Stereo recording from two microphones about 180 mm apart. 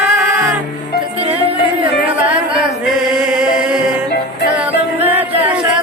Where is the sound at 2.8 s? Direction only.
5° right (ahead or behind).